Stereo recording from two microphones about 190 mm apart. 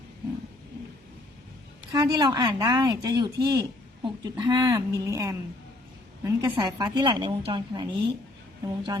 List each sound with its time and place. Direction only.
1.9 s speech: 20° right (ahead or behind)